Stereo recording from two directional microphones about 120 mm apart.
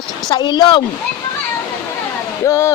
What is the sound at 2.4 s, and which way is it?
Speech, 25° left (ahead or behind).